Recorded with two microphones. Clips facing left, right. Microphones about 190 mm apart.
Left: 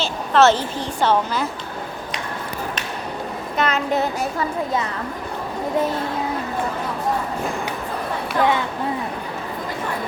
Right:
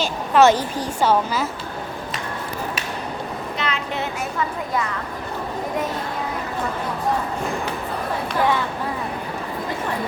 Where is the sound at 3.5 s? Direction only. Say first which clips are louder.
Left 8 dB; 45° left (ahead or behind).